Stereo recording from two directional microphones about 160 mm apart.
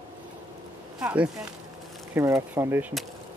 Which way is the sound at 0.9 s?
5° right (ahead or behind).